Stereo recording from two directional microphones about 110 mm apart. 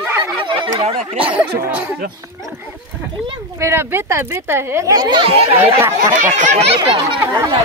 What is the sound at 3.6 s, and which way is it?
Speech, 20° right (ahead or behind).